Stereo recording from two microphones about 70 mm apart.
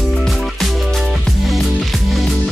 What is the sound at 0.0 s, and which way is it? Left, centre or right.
Music, centre.